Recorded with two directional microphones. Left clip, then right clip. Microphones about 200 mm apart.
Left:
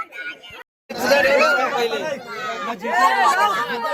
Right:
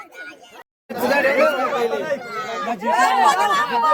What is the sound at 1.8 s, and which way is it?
Chatter, 20° right (ahead or behind).